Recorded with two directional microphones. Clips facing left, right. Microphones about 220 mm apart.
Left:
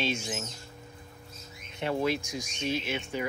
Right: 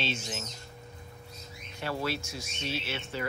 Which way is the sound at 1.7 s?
20° left (ahead or behind).